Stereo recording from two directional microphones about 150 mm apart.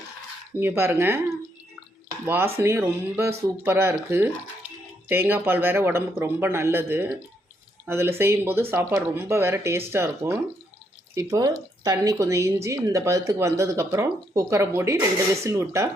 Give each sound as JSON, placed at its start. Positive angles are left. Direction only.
{"t": 0.6, "sound": "speech", "side_deg": -15}
{"t": 2.2, "sound": "speech", "side_deg": -15}